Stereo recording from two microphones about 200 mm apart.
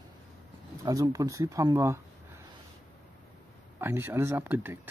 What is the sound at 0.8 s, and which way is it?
Speech, 15° right (ahead or behind).